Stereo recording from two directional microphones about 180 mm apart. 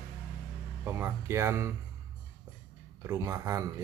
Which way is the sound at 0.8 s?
15° right (ahead or behind).